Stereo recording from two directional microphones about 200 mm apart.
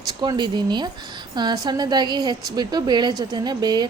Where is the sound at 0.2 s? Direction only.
20° right (ahead or behind).